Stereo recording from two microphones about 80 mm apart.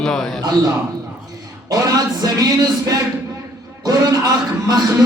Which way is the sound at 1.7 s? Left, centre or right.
Right.